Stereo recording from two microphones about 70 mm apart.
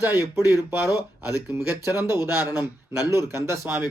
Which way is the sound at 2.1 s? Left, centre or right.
Right.